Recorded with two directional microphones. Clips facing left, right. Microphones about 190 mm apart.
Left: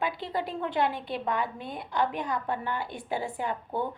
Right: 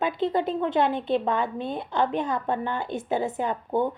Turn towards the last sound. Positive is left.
turn(degrees=-20)  # may be behind; listen again after turning